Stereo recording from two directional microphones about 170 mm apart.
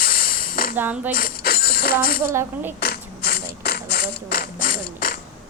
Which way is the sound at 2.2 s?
15° right (ahead or behind).